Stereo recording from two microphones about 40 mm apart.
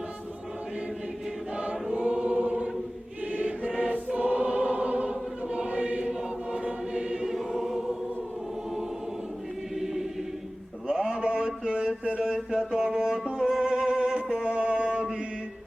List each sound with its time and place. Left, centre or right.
2.1 s choir: right
6.5 s choir: right
9.8 s choir: centre
10.8 s a sound: centre
12.2 s music: centre